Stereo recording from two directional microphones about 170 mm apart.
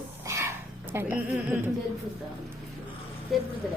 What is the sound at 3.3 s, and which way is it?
Speech, centre (ahead or behind).